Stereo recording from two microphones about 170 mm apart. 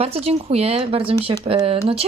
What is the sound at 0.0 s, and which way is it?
Speech, 35° right (ahead or behind).